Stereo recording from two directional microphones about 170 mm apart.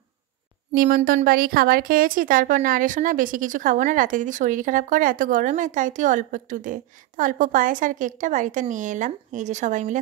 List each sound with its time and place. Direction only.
0.7 s a woman's voice: 55° right (ahead or behind)